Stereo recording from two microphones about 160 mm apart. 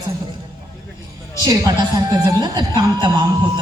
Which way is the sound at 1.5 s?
25° right (ahead or behind).